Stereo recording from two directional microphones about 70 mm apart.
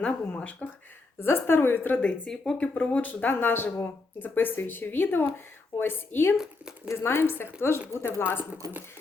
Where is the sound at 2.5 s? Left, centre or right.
Centre.